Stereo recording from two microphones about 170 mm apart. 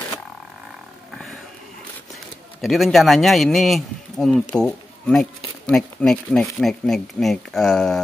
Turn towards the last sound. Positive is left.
turn(degrees=5)  # may be behind; listen again after turning